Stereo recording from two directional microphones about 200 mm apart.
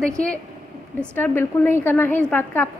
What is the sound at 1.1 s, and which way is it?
A woman's voice, 10° left (ahead or behind).